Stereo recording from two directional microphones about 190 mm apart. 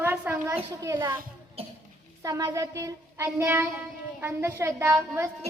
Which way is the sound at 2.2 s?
15° right (ahead or behind).